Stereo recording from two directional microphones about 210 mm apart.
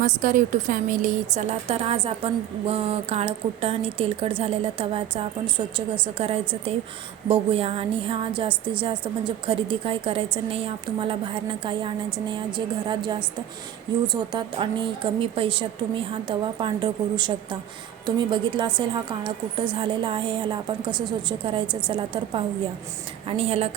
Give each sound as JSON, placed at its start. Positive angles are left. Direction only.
{"t": 0.0, "sound": "a woman's voice", "side_deg": -40}